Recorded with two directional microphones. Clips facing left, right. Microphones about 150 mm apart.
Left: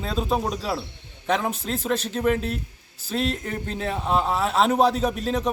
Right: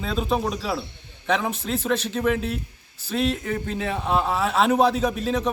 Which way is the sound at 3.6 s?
35° left (ahead or behind).